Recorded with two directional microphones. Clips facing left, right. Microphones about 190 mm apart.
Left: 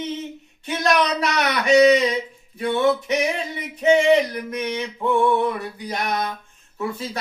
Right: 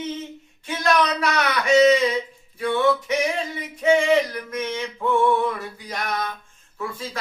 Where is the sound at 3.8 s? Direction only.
20° left (ahead or behind).